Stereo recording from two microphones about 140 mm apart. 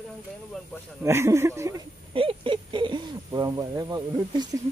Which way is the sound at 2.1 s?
40° right (ahead or behind).